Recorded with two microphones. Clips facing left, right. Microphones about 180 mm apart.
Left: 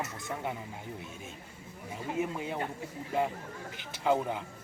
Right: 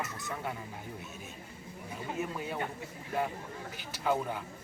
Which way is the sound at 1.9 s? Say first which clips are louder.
Left 3 dB; 20° left (ahead or behind).